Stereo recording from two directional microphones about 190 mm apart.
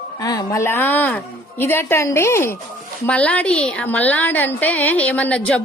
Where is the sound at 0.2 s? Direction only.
20° left (ahead or behind).